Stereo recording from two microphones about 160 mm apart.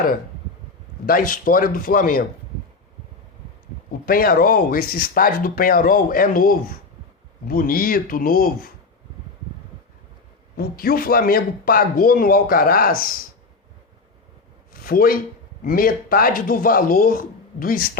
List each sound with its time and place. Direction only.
1.0 s speech: 60° left (ahead or behind)
4.0 s speech: 65° left (ahead or behind)
10.6 s speech: 70° left (ahead or behind)
14.7 s a sound: 65° left (ahead or behind)
15.6 s speech: 65° left (ahead or behind)